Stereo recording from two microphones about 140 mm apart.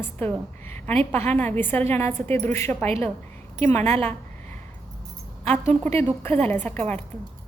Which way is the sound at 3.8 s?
45° right (ahead or behind).